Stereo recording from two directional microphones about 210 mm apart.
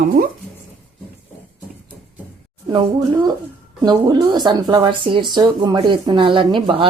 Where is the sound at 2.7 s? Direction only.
25° right (ahead or behind).